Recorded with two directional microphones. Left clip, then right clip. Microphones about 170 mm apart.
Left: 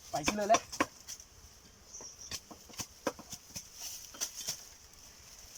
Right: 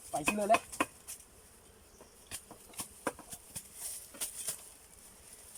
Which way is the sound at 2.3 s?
Centre (ahead or behind).